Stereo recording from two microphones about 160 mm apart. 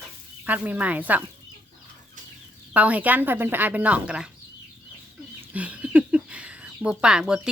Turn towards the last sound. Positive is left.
turn(degrees=-5)  # may be behind; listen again after turning